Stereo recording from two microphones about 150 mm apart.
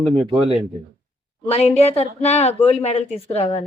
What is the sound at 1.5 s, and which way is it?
A woman's voice, 45° left (ahead or behind).